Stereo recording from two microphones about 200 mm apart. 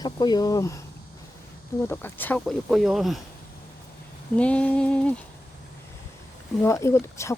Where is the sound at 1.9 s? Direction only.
10° left (ahead or behind).